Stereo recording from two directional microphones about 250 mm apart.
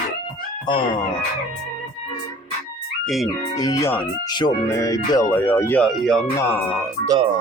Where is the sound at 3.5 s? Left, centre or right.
Centre.